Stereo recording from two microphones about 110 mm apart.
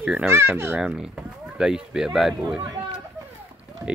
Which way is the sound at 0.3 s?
25° right (ahead or behind).